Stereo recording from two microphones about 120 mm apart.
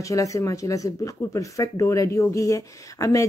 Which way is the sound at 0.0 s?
25° left (ahead or behind).